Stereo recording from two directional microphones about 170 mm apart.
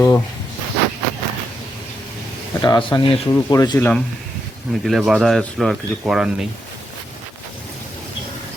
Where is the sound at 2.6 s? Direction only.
25° left (ahead or behind).